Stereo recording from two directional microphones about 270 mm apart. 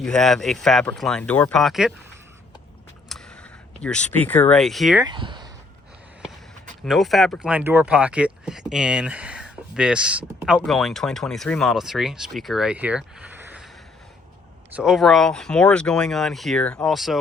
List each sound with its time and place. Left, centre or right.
0.0 s speech: centre
3.1 s speech: centre
5.0 s speech: centre
6.8 s speech: centre
14.8 s speech: centre